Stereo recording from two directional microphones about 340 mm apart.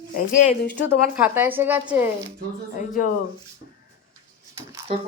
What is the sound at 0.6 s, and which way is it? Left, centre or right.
Speech, left.